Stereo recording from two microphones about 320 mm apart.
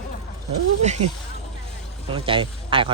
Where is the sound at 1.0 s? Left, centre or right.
Right.